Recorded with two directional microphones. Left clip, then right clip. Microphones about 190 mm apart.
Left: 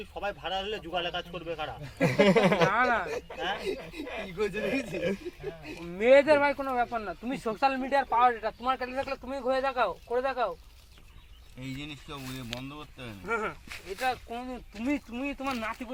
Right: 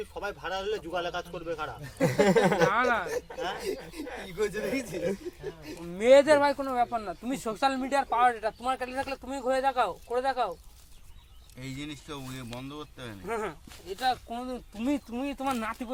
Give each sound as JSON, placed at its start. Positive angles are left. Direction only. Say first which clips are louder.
{"t": 0.1, "sound": "speech", "louder": "left 5 dB", "side_deg": -30}
{"t": 2.6, "sound": "speech", "louder": "even", "side_deg": 0}
{"t": 3.3, "sound": "speech", "louder": "left 1 dB", "side_deg": -25}
{"t": 3.7, "sound": "speech", "louder": "even", "side_deg": -10}
{"t": 11.8, "sound": "speech", "louder": "right 4 dB", "side_deg": -30}
{"t": 13.2, "sound": "speech", "louder": "left 2 dB", "side_deg": 0}
{"t": 14.0, "sound": "speech", "louder": "right 2 dB", "side_deg": -25}